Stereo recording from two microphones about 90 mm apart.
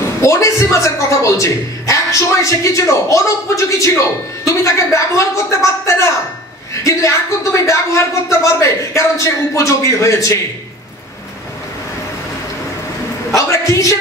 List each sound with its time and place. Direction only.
0.2 s a man's voice: 35° left (ahead or behind)
13.4 s a man's voice: 35° left (ahead or behind)